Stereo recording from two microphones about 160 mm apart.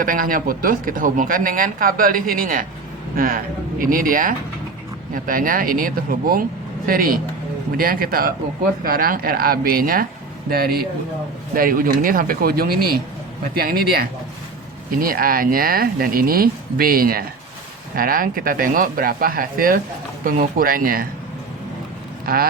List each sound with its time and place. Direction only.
0.0 s a woman's voice: 60° right (ahead or behind)